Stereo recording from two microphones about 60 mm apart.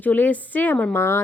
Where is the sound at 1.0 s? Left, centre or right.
Left.